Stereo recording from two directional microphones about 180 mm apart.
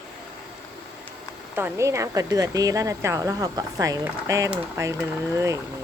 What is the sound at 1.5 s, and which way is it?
A woman's voice, 15° right (ahead or behind).